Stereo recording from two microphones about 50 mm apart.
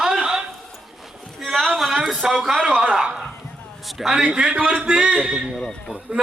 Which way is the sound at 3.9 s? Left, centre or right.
Centre.